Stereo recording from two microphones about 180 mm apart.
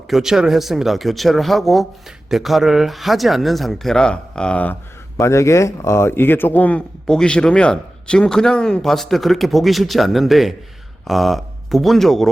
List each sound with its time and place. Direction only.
0.1 s speech: centre (ahead or behind)